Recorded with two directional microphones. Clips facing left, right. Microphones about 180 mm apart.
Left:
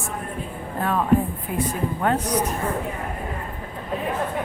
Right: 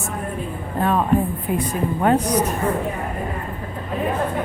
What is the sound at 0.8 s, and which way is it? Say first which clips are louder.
A woman's voice: right 2 dB; 25° right (ahead or behind).